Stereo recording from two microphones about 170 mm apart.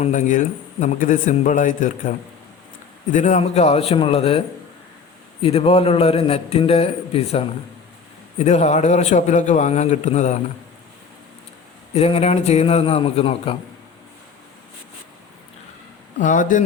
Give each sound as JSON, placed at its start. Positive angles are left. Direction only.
{"t": 0.0, "sound": "a man's voice", "side_deg": 45}
{"t": 11.9, "sound": "a man's voice", "side_deg": 35}
{"t": 16.1, "sound": "a man's voice", "side_deg": 50}